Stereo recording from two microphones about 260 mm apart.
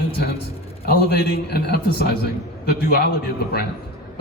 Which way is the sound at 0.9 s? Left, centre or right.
Left.